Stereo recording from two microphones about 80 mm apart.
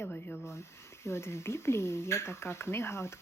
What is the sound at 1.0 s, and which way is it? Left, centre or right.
Speech, left.